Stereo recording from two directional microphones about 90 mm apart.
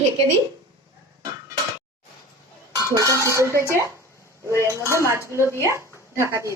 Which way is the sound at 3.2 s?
35° right (ahead or behind).